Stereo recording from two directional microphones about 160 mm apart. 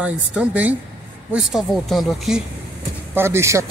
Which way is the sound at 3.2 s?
15° right (ahead or behind).